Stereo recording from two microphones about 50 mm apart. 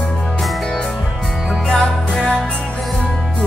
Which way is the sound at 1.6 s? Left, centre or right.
Centre.